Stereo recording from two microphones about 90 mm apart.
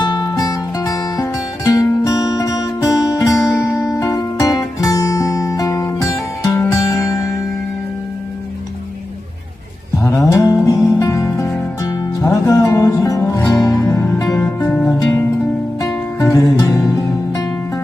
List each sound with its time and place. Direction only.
0.0 s music: 50° left (ahead or behind)
10.0 s music: 35° left (ahead or behind)
14.7 s music: 10° left (ahead or behind)
15.8 s music: 40° left (ahead or behind)